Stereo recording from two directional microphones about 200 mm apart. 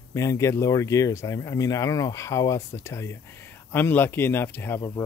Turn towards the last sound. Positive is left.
turn(degrees=10)  # may be behind; listen again after turning